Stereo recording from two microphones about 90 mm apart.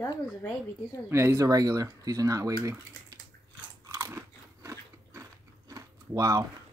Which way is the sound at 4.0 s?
30° right (ahead or behind).